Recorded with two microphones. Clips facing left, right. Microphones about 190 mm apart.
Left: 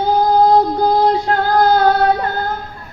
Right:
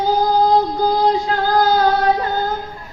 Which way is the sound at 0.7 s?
65° left (ahead or behind).